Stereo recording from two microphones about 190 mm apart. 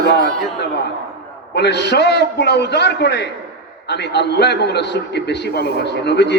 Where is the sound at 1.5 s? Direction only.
60° left (ahead or behind).